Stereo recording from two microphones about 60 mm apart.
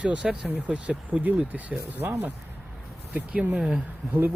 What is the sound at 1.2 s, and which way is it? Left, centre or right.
Speech, right.